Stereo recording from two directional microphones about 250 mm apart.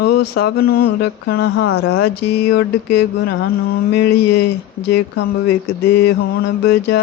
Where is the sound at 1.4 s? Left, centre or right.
Left.